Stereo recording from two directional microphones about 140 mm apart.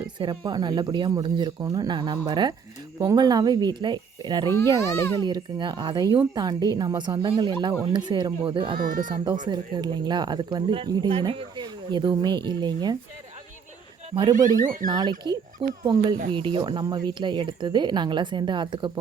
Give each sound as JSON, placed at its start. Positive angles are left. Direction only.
{"t": 0.2, "sound": "speech", "side_deg": -30}
{"t": 8.8, "sound": "speech", "side_deg": -75}
{"t": 9.0, "sound": "speech", "side_deg": -35}
{"t": 14.3, "sound": "speech", "side_deg": -70}
{"t": 14.8, "sound": "speech", "side_deg": -30}